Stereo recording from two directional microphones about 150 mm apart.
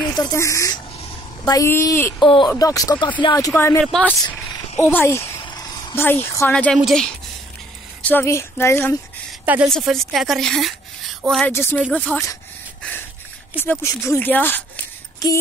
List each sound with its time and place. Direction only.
0.1 s a woman's voice: 25° left (ahead or behind)
2.1 s speech: 30° left (ahead or behind); by 3.8 s 15° left (ahead or behind)
3.8 s a woman's voice: centre (ahead or behind)
4.8 s speech: 15° left (ahead or behind)
5.4 s a sound: 25° left (ahead or behind)
5.9 s speech: 15° left (ahead or behind)
6.5 s a woman's voice: 5° left (ahead or behind)
8.0 s speech: 10° left (ahead or behind)
9.7 s a woman's voice: centre (ahead or behind)
11.5 s speech: 15° left (ahead or behind)
13.6 s speech: 15° left (ahead or behind)